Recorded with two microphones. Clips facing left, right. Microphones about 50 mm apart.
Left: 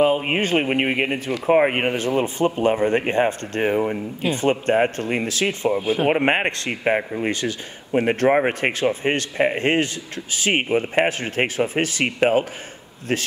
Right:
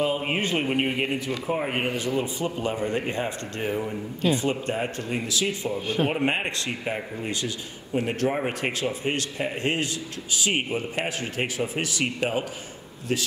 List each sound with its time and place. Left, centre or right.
0.2 s speech: left
5.8 s speech: centre
6.0 s speech: left